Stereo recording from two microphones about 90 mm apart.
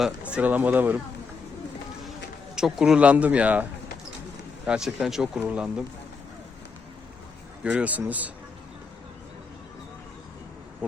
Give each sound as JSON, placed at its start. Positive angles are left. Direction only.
{"t": 0.2, "sound": "a man's voice", "side_deg": -15}
{"t": 2.6, "sound": "a man's voice", "side_deg": -5}
{"t": 5.4, "sound": "a man's voice", "side_deg": -15}
{"t": 7.6, "sound": "a man's voice", "side_deg": -10}